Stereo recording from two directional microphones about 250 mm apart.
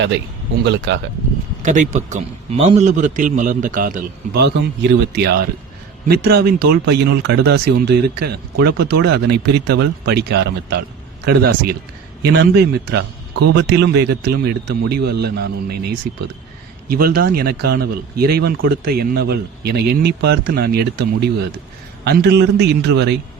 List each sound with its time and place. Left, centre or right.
0.6 s speech: right
1.6 s a man's voice: right